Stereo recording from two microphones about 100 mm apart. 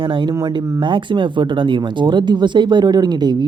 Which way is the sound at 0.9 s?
55° right (ahead or behind).